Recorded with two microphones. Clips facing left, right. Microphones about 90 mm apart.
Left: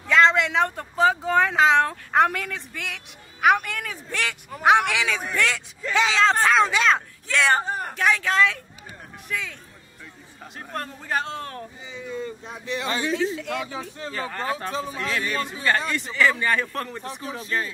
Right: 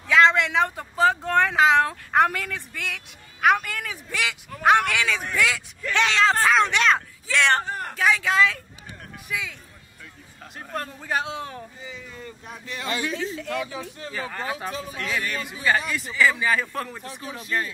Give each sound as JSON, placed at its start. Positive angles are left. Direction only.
{"t": 0.1, "sound": "speech", "side_deg": 0}
{"t": 5.8, "sound": "a woman's voice", "side_deg": 5}
{"t": 10.6, "sound": "speech", "side_deg": 0}
{"t": 11.8, "sound": "speech", "side_deg": 20}
{"t": 14.1, "sound": "speech", "side_deg": -5}
{"t": 14.7, "sound": "speech", "side_deg": 30}
{"t": 15.9, "sound": "speech", "side_deg": 0}